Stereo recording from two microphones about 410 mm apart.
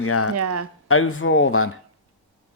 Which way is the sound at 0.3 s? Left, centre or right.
Right.